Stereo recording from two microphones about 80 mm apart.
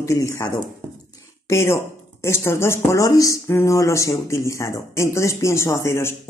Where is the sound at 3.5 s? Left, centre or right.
Left.